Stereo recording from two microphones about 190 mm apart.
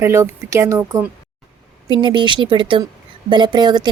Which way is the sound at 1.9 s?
25° right (ahead or behind).